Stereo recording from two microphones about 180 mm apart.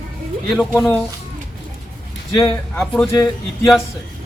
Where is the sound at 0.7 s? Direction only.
5° left (ahead or behind).